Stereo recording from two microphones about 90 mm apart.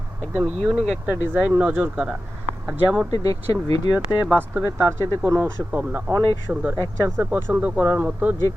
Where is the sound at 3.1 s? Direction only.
45° left (ahead or behind).